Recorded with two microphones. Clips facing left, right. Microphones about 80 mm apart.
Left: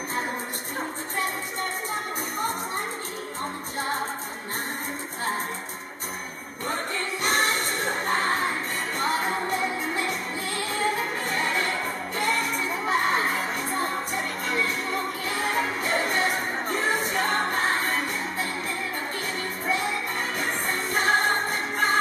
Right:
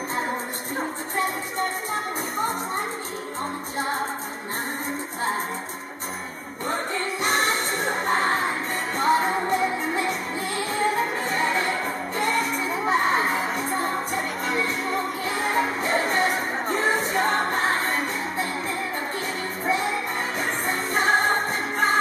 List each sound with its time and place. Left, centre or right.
7.3 s music: centre
20.3 s music: centre